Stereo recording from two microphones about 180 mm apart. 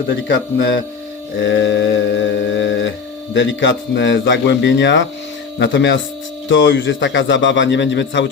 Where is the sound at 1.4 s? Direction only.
90° left.